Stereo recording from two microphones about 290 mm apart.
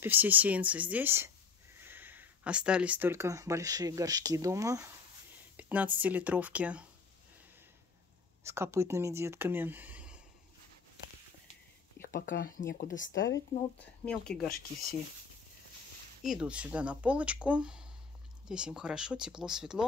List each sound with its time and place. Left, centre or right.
0.0 s speech: centre
5.6 s a sound: centre
5.9 s speech: centre
8.5 s speech: centre
12.0 s speech: left
14.0 s speech: centre
16.2 s speech: centre